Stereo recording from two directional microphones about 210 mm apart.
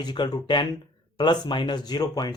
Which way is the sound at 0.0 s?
20° left (ahead or behind).